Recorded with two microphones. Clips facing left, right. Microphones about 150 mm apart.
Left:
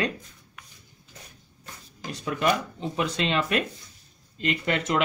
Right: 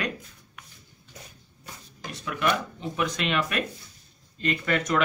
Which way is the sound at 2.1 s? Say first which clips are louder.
Left 4 dB; 30° left (ahead or behind).